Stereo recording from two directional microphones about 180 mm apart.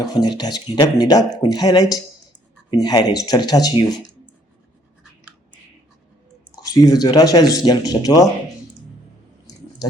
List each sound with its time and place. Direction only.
0.0 s speech: 20° left (ahead or behind)
6.6 s speech: 20° left (ahead or behind)